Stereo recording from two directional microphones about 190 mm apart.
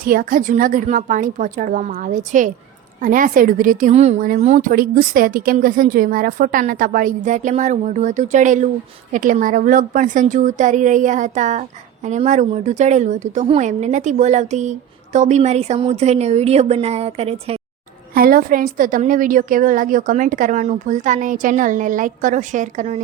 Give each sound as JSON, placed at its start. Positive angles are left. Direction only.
{"t": 0.0, "sound": "a woman's voice", "side_deg": -50}
{"t": 18.1, "sound": "a woman's voice", "side_deg": -50}